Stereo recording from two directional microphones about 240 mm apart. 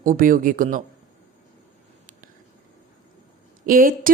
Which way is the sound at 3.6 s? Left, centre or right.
Right.